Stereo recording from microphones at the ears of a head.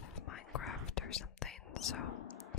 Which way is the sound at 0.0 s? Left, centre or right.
Left.